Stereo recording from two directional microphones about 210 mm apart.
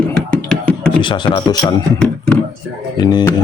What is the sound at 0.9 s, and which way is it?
Speech, 20° left (ahead or behind).